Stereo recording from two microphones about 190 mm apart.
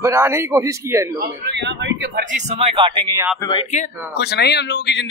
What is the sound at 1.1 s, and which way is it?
A man's voice, 65° right (ahead or behind).